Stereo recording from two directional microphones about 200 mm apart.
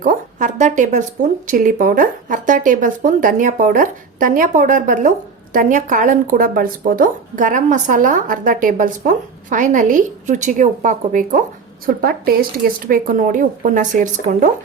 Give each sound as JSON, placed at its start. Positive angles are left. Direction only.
{"t": 0.0, "sound": "speech", "side_deg": -40}